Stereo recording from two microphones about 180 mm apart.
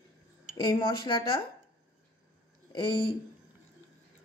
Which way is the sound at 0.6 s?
25° left (ahead or behind).